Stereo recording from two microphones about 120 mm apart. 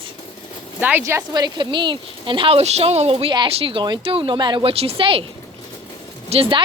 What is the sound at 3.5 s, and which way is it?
A woman's voice, 45° right (ahead or behind).